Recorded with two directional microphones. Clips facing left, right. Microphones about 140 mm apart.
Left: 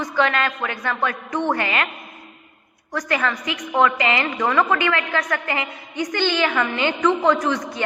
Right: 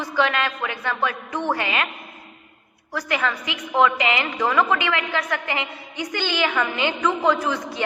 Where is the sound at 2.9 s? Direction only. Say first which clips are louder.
Left 2 dB; 10° right (ahead or behind).